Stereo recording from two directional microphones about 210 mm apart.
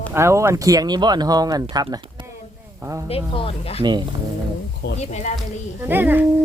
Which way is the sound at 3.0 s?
25° left (ahead or behind).